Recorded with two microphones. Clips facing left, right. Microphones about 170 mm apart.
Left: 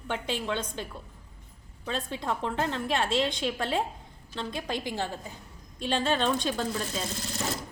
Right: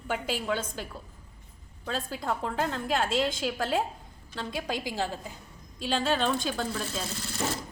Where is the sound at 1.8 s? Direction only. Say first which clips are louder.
Even; centre (ahead or behind).